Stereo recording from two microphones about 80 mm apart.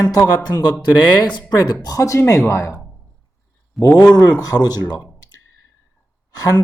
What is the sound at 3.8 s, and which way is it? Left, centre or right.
Speech, left.